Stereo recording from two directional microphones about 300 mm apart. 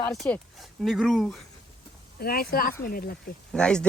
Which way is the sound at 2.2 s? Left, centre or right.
Left.